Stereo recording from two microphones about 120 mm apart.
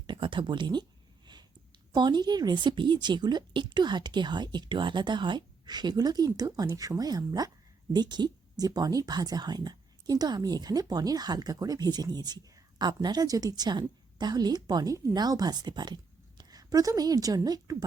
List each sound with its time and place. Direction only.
0.1 s speech: 45° right (ahead or behind)
1.9 s a woman's voice: 40° right (ahead or behind)